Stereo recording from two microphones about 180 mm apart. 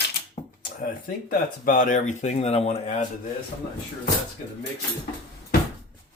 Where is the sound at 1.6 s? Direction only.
45° left (ahead or behind).